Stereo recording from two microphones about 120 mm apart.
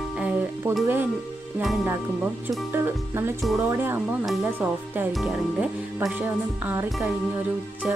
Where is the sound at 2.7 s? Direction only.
20° right (ahead or behind).